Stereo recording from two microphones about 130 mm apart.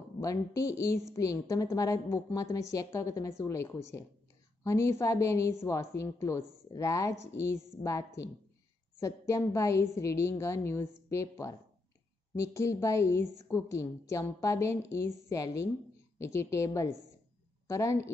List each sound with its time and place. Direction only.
0.2 s a woman's voice: 25° left (ahead or behind)